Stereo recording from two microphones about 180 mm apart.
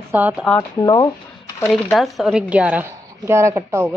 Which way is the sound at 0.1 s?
10° right (ahead or behind).